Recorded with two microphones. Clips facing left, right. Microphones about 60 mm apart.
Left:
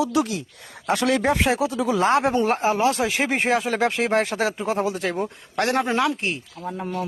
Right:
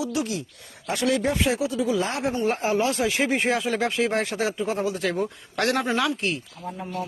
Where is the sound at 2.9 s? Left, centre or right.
Left.